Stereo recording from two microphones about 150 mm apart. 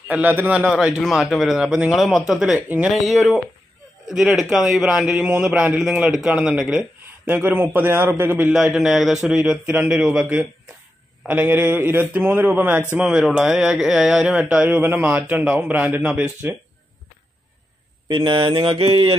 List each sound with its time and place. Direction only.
0.1 s a man's voice: 10° right (ahead or behind)
18.0 s mantra: 35° right (ahead or behind)